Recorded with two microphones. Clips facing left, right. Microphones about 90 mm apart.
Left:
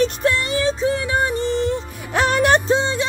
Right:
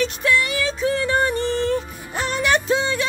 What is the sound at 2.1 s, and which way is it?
Music, 60° left (ahead or behind).